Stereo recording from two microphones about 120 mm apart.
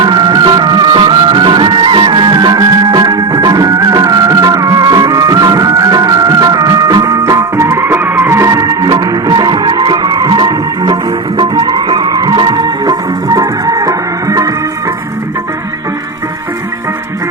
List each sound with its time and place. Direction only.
0.0 s music: 40° right (ahead or behind)